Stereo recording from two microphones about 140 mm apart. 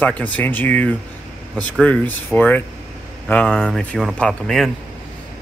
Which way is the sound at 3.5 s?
5° right (ahead or behind).